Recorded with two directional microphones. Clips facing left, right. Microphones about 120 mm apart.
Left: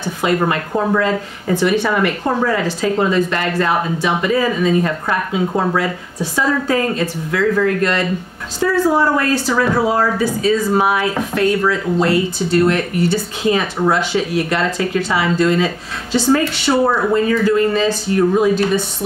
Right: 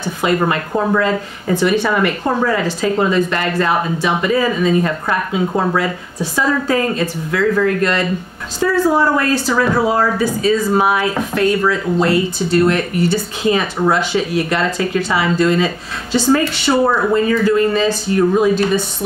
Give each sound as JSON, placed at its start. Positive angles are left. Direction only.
{"t": 0.2, "sound": "speech", "side_deg": -20}